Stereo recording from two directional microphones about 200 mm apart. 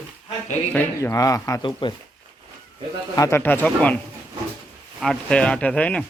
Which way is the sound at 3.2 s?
15° left (ahead or behind).